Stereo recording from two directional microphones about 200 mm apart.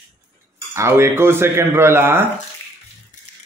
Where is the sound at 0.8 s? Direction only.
15° right (ahead or behind).